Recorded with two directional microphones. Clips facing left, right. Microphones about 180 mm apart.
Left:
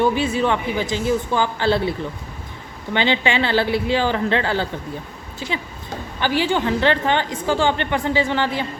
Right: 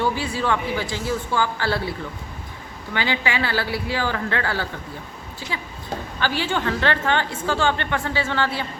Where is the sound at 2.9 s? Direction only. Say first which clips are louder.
Left 5 dB; 25° left (ahead or behind).